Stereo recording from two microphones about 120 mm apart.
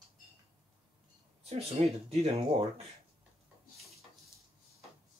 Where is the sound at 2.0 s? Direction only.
55° right (ahead or behind).